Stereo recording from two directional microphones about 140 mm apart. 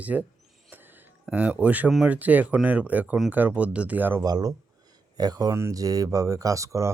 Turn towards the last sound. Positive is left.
turn(degrees=-20)  # may be behind; listen again after turning